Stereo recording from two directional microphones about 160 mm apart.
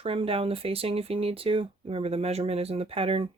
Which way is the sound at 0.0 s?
35° right (ahead or behind).